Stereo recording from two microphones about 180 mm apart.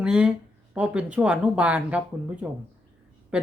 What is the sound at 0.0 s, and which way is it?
Speech, 5° right (ahead or behind).